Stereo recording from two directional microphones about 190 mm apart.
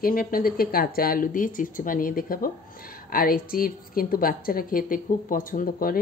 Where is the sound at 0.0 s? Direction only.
50° left (ahead or behind).